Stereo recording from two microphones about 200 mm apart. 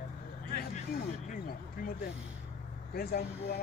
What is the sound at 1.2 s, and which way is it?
Speech, 45° left (ahead or behind).